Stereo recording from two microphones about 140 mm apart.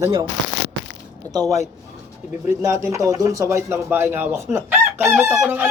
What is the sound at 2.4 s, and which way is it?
Speech, 20° right (ahead or behind).